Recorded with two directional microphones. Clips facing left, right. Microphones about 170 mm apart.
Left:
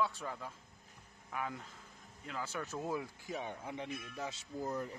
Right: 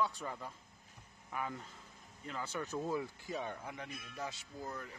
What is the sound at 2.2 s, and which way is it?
Speech, 5° left (ahead or behind).